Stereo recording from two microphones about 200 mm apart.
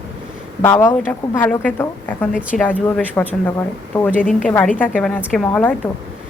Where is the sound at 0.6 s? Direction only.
10° left (ahead or behind).